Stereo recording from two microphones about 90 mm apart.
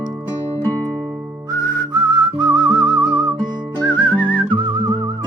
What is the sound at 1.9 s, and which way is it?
Whistling, 50° right (ahead or behind).